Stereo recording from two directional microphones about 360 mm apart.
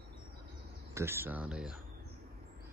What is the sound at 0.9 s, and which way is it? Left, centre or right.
Speech, centre.